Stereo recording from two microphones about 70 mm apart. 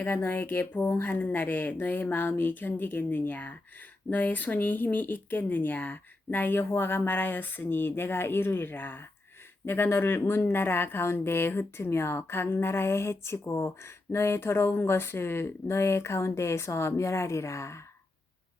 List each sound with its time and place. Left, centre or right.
0.0 s speech: left